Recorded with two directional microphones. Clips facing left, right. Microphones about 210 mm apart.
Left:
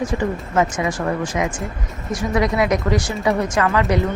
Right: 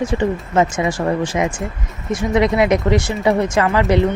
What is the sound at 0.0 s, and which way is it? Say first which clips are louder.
Speech: right 3 dB; 30° right (ahead or behind).